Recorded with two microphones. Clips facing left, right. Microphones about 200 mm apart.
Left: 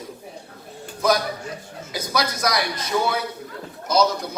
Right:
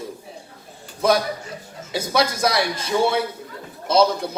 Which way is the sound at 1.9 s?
25° right (ahead or behind).